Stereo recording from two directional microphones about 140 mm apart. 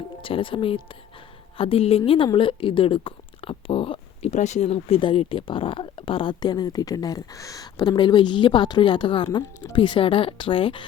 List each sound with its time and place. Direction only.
0.2 s a woman's voice: 40° left (ahead or behind)
4.3 s speech: 55° left (ahead or behind); by 10.8 s 40° left (ahead or behind)